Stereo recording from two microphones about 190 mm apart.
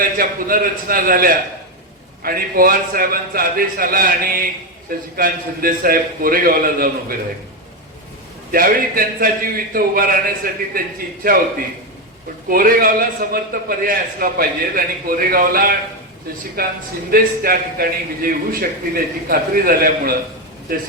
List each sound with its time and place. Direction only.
0.0 s a man's voice: 50° right (ahead or behind)
8.5 s a man's voice: 50° right (ahead or behind)
12.5 s a man's voice: 50° right (ahead or behind)